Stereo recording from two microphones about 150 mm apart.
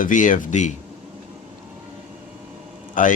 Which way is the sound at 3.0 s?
60° left (ahead or behind).